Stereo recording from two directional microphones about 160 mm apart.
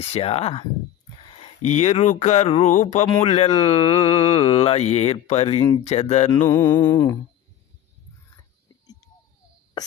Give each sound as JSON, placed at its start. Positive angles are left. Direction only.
{"t": 0.0, "sound": "speech", "side_deg": 40}
{"t": 6.4, "sound": "music", "side_deg": 20}
{"t": 9.8, "sound": "a sound", "side_deg": 25}